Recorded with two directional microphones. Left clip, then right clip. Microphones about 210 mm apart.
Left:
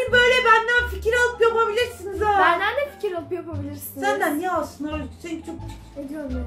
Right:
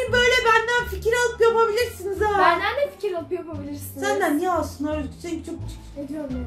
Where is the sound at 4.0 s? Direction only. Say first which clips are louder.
Even; 35° right (ahead or behind).